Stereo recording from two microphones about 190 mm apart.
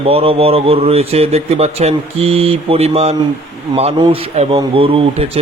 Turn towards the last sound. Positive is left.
turn(degrees=-30)  # may be behind; listen again after turning